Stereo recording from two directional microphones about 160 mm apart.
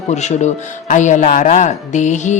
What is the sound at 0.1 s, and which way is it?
A woman's voice, 45° left (ahead or behind).